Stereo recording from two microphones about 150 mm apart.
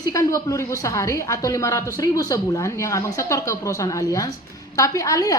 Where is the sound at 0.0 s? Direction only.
25° left (ahead or behind).